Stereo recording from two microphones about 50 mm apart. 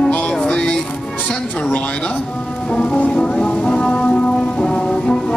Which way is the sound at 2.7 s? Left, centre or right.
Left.